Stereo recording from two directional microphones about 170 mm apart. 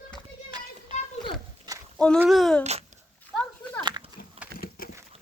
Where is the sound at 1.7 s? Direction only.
20° right (ahead or behind).